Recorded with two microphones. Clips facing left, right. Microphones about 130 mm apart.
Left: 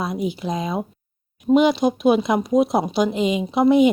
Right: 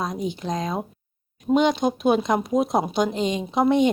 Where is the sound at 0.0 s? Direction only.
5° left (ahead or behind).